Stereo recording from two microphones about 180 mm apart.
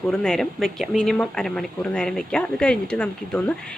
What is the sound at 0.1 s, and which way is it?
Speech, 5° left (ahead or behind).